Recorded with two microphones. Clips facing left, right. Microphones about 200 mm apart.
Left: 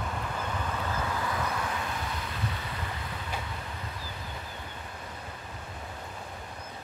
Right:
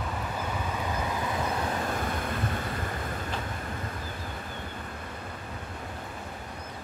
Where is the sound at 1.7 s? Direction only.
45° right (ahead or behind).